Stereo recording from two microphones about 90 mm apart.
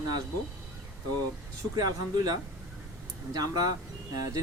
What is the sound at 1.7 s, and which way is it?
Speech, 50° right (ahead or behind).